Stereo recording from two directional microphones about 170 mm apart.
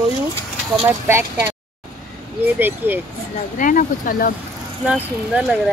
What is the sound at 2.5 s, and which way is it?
Speech, 10° right (ahead or behind).